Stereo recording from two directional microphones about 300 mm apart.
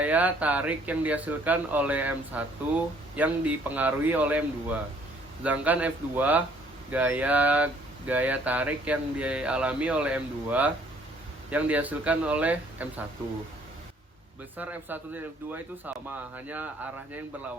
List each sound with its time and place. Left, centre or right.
0.0 s speech: centre
14.5 s speech: centre